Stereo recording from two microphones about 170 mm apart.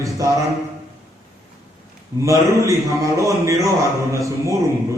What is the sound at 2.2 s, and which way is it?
A man's voice, 15° right (ahead or behind).